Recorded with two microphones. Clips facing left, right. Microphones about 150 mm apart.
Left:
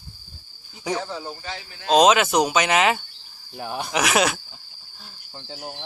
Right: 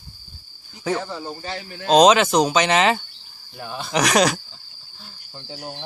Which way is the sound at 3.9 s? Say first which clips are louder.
Right 3 dB; 5° left (ahead or behind).